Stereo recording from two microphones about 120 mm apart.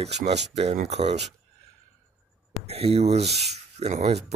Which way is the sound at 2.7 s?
55° right (ahead or behind).